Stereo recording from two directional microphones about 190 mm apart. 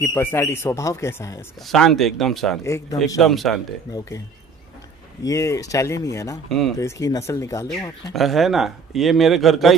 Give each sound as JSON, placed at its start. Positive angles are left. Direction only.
{"t": 0.0, "sound": "speech", "side_deg": 10}
{"t": 1.7, "sound": "speech", "side_deg": 0}
{"t": 2.6, "sound": "speech", "side_deg": 15}
{"t": 3.2, "sound": "speech", "side_deg": 0}
{"t": 5.2, "sound": "speech", "side_deg": 15}
{"t": 8.1, "sound": "speech", "side_deg": 0}